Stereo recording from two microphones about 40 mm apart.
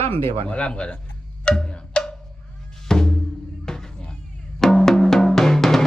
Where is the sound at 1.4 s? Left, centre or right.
Left.